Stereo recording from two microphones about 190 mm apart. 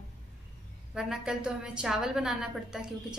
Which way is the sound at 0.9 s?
5° right (ahead or behind).